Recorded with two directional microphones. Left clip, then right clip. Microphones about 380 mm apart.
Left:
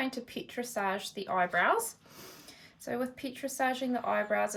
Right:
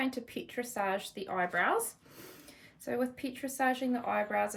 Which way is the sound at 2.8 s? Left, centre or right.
Centre.